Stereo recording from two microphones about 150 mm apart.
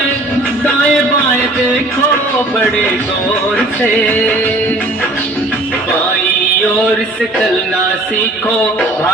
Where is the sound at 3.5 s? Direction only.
10° left (ahead or behind).